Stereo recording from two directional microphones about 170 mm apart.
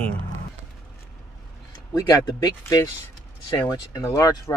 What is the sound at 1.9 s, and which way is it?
Speech, 20° left (ahead or behind).